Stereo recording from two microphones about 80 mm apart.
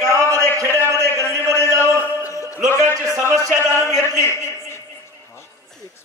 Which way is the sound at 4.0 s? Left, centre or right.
Left.